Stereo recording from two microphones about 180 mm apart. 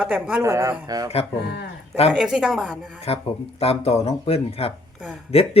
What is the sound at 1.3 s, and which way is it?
Speech, 70° left (ahead or behind).